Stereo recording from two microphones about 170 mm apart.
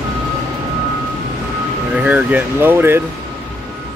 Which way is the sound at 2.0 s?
10° right (ahead or behind).